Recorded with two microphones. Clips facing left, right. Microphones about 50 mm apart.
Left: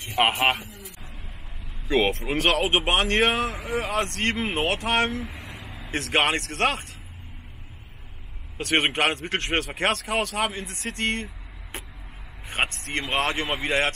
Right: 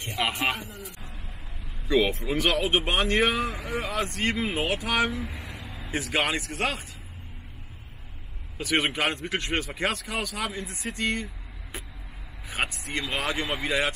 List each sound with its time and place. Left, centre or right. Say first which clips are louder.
0.1 s speech: left 6 dB; left
2.0 s speech: left 3 dB; left
3.7 s speech: left 4 dB; left
5.2 s a sound: even; left
5.9 s speech: left 4 dB; left
8.5 s speech: left 3 dB; left
12.4 s vehicle: left 3 dB; left
12.9 s speech: left 3 dB; left